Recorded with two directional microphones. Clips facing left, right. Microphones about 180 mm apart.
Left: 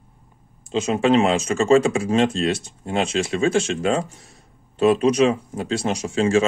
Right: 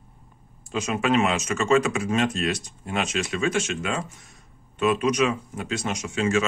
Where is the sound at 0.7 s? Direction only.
30° left (ahead or behind).